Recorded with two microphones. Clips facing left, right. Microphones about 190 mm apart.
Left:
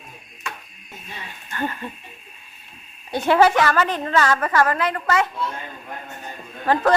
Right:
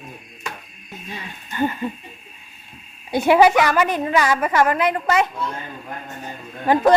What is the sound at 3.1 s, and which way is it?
A woman's voice, 10° right (ahead or behind).